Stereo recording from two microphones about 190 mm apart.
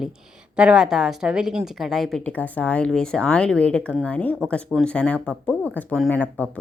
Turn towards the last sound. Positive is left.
turn(degrees=10)  # may be behind; listen again after turning